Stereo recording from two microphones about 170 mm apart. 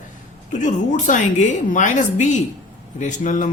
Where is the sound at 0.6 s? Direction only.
45° left (ahead or behind).